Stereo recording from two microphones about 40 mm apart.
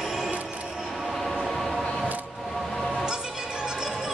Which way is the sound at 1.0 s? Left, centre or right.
Centre.